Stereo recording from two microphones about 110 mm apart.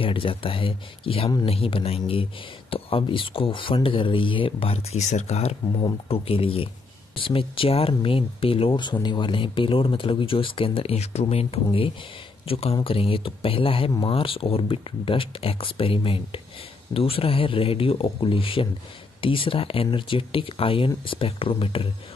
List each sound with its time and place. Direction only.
0.0 s speech: 55° left (ahead or behind); by 5.6 s 75° left (ahead or behind)
6.0 s speech: 60° left (ahead or behind)